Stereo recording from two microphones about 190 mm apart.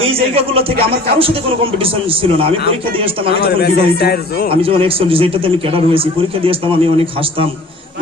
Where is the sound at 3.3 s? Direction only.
60° left (ahead or behind).